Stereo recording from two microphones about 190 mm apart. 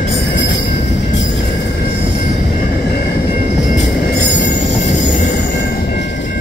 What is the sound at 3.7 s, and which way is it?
Train, 65° left (ahead or behind).